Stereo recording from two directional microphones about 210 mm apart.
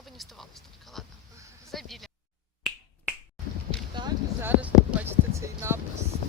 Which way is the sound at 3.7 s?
5° left (ahead or behind).